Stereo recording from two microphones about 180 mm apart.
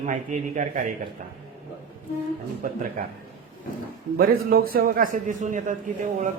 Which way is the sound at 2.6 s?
50° right (ahead or behind).